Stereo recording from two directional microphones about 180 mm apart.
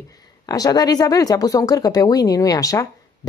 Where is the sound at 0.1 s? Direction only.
20° left (ahead or behind).